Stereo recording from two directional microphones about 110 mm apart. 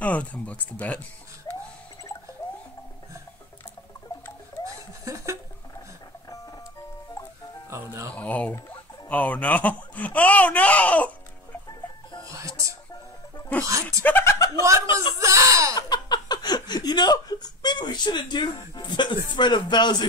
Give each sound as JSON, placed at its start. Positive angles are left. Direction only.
{"t": 0.0, "sound": "speech", "side_deg": 10}
{"t": 1.5, "sound": "a sound", "side_deg": 40}
{"t": 5.0, "sound": "speech", "side_deg": -30}
{"t": 8.1, "sound": "speech", "side_deg": 15}
{"t": 12.4, "sound": "music", "side_deg": -30}
{"t": 14.0, "sound": "speech", "side_deg": 20}
{"t": 14.6, "sound": "speech", "side_deg": -25}
{"t": 15.7, "sound": "speech", "side_deg": 40}